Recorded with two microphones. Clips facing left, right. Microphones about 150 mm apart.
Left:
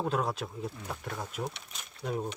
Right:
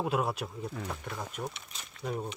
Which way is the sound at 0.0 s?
5° right (ahead or behind).